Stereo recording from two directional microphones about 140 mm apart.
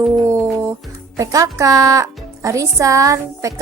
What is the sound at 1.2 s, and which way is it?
Music, 20° right (ahead or behind).